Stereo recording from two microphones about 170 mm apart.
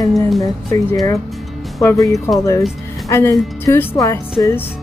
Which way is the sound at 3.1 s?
20° left (ahead or behind).